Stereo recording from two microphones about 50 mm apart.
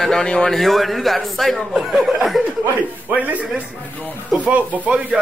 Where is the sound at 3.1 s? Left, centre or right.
Right.